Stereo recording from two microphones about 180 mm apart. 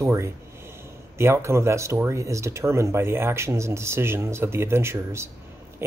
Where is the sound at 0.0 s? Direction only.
15° right (ahead or behind).